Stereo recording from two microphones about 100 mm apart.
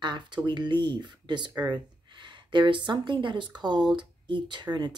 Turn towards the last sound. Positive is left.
turn(degrees=-45)  # may be behind; listen again after turning